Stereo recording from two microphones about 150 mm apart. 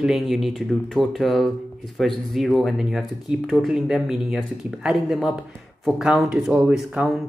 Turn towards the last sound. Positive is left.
turn(degrees=-5)  # may be behind; listen again after turning